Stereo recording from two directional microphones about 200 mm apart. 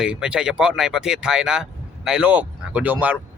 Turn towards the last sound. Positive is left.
turn(degrees=-10)  # may be behind; listen again after turning